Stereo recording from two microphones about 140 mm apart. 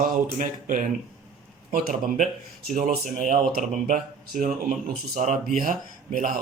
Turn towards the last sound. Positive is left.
turn(degrees=-75)  # may be behind; listen again after turning